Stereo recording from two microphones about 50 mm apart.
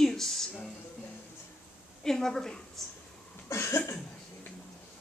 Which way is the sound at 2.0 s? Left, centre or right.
Centre.